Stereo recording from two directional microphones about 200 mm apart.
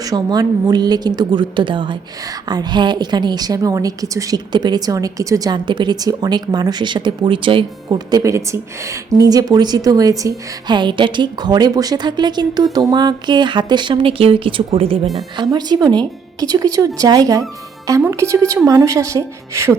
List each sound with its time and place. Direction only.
0.0 s a woman's voice: 20° right (ahead or behind)